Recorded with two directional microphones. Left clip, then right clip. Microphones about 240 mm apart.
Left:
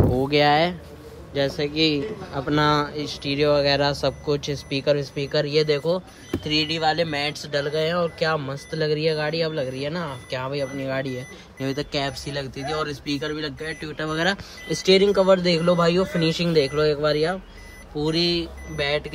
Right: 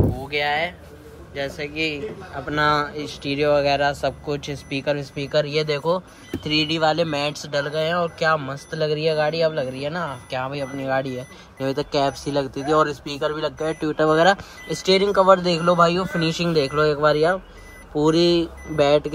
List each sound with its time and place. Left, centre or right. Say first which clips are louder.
0.3 s speech: left 4 dB; centre